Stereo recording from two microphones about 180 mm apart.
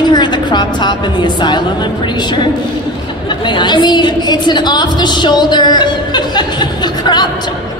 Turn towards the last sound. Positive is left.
turn(degrees=25)  # may be behind; listen again after turning